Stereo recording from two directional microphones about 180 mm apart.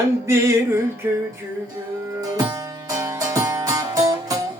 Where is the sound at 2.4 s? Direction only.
20° right (ahead or behind).